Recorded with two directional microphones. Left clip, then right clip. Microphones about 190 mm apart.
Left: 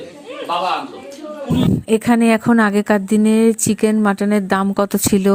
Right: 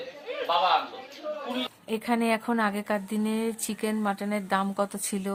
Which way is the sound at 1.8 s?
35° left (ahead or behind).